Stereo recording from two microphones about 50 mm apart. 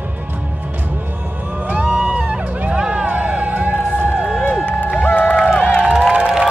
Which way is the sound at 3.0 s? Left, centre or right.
Centre.